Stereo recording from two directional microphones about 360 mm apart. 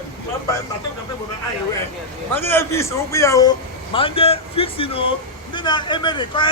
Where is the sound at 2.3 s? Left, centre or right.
Centre.